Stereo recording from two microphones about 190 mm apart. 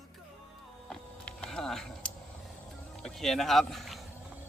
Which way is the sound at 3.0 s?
Centre (ahead or behind).